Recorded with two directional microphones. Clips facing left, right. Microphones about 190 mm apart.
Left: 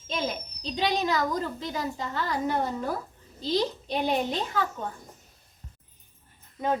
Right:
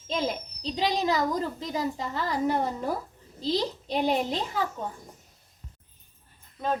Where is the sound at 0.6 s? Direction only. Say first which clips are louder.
Even; 25° right (ahead or behind).